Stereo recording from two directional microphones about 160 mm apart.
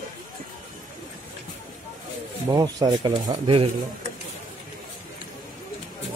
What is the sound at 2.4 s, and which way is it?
Speech, 25° right (ahead or behind).